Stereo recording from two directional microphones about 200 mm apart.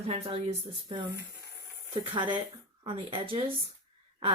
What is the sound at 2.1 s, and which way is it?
A woman's voice, 25° right (ahead or behind).